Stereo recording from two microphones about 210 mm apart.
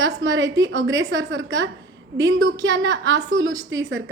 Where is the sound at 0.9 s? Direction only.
60° right (ahead or behind).